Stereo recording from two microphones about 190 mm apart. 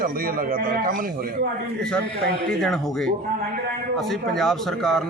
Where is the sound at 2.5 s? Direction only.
Centre (ahead or behind).